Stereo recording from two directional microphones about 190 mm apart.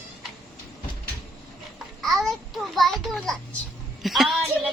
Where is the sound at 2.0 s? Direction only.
Centre (ahead or behind).